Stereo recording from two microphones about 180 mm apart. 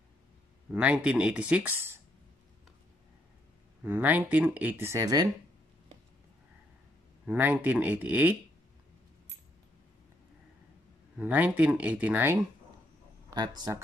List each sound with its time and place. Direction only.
0.7 s speech: 5° right (ahead or behind)
3.8 s speech: 10° right (ahead or behind)
7.2 s speech: 10° right (ahead or behind)
11.1 s speech: 10° right (ahead or behind)
13.3 s speech: 20° right (ahead or behind)